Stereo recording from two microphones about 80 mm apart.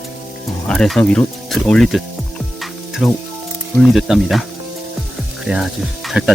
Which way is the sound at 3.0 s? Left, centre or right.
Centre.